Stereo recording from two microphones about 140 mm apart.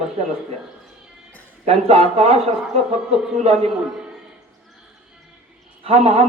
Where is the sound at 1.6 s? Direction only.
50° right (ahead or behind).